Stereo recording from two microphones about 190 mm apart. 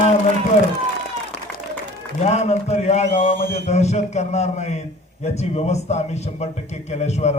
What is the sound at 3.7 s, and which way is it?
A man's voice, 35° left (ahead or behind).